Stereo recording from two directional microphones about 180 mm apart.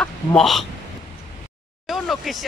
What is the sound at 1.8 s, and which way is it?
Speech, centre (ahead or behind).